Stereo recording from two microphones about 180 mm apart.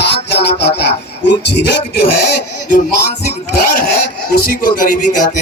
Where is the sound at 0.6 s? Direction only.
70° left (ahead or behind).